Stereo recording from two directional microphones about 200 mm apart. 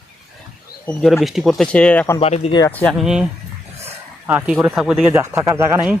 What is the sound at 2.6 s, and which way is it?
Speech, 5° left (ahead or behind).